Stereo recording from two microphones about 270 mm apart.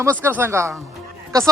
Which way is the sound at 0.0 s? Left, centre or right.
Centre.